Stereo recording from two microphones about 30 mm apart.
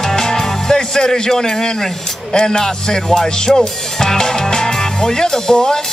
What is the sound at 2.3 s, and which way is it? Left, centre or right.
Music, left.